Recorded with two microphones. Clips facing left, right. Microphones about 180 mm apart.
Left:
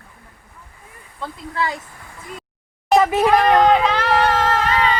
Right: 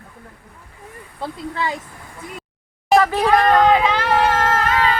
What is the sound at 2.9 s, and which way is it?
Speech, 20° left (ahead or behind).